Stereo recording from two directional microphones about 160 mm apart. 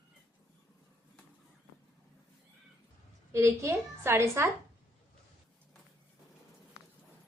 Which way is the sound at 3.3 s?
15° right (ahead or behind).